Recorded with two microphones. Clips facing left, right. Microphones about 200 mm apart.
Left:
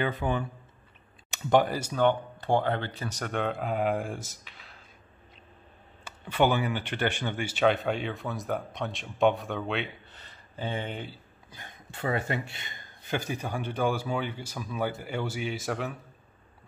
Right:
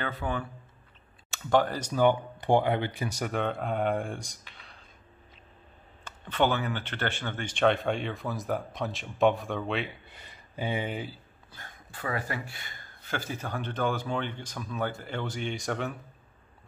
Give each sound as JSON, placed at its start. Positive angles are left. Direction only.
{"t": 0.0, "sound": "speech", "side_deg": 20}
{"t": 2.0, "sound": "speech", "side_deg": -10}
{"t": 6.0, "sound": "speech", "side_deg": 10}
{"t": 10.0, "sound": "a sound", "side_deg": -10}
{"t": 11.5, "sound": "a man's voice", "side_deg": 20}